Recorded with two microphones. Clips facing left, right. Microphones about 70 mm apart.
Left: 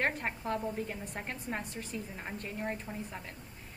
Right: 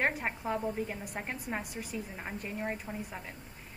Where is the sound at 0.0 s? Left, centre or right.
Centre.